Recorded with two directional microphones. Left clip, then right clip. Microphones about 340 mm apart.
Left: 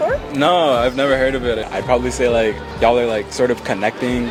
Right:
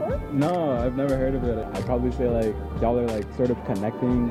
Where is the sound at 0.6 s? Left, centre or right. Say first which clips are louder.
Left 10 dB; centre.